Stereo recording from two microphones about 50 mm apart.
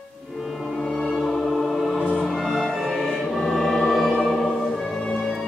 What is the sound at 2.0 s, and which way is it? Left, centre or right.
Music, centre.